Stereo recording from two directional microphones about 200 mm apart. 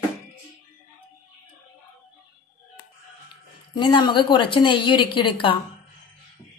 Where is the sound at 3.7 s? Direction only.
20° left (ahead or behind).